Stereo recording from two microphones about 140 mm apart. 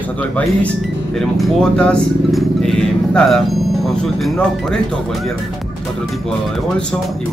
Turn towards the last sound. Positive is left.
turn(degrees=5)  # may be behind; listen again after turning